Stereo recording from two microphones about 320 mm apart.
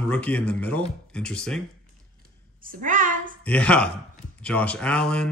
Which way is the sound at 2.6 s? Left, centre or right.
Right.